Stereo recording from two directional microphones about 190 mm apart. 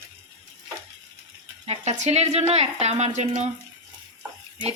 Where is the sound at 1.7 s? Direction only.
35° right (ahead or behind).